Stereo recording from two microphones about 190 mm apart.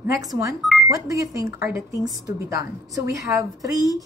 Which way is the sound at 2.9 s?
20° right (ahead or behind).